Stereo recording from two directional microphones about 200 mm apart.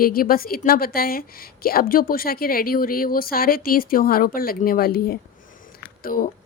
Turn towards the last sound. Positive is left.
turn(degrees=45)  # may be behind; listen again after turning